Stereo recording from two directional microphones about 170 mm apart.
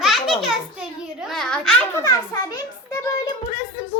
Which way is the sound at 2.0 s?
20° left (ahead or behind).